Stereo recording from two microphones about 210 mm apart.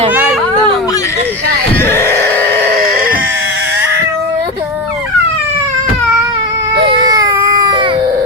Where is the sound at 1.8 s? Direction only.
10° left (ahead or behind).